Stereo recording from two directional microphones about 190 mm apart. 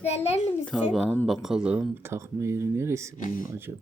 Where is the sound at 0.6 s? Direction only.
Centre (ahead or behind).